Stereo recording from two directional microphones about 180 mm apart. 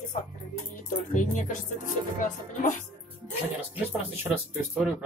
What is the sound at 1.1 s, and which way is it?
Speech, 45° left (ahead or behind).